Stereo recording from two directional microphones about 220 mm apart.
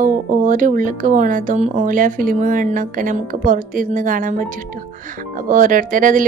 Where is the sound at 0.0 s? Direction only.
35° right (ahead or behind).